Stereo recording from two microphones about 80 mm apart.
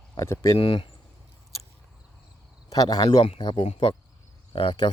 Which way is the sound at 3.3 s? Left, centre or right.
Left.